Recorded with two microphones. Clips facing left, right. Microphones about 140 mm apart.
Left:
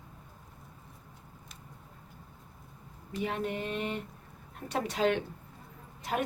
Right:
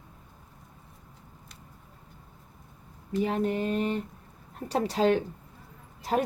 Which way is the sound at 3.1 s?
35° right (ahead or behind).